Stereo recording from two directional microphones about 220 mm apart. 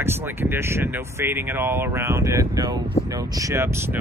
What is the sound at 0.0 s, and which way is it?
Speech, 10° right (ahead or behind).